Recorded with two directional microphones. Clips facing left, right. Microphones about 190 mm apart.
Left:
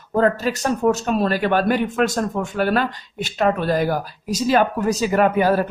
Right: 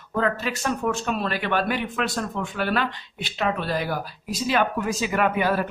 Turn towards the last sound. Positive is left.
turn(degrees=40)  # may be behind; listen again after turning